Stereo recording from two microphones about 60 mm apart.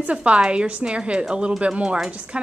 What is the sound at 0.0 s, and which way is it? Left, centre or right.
A woman's voice, right.